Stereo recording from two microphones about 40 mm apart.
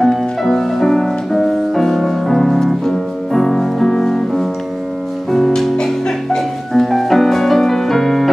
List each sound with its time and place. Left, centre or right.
0.0 s music: centre